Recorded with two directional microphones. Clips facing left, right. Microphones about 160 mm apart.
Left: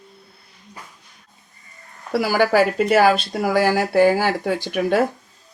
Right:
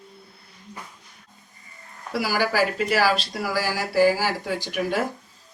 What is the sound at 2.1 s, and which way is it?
Speech, 55° left (ahead or behind).